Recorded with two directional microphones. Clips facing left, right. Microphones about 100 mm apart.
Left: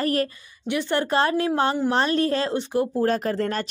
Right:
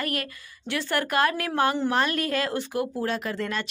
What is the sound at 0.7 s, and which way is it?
A woman's voice, 20° left (ahead or behind).